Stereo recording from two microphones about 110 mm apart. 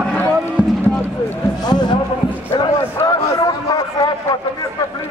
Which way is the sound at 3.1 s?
35° left (ahead or behind).